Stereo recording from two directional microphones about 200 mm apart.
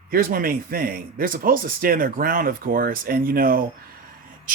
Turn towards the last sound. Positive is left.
turn(degrees=-45)  # may be behind; listen again after turning